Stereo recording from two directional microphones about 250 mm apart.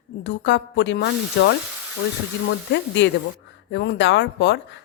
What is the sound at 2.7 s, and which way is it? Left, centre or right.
Speech, left.